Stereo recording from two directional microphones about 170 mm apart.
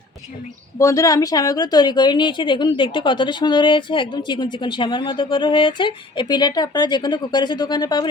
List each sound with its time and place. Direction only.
0.8 s a woman's voice: 20° left (ahead or behind)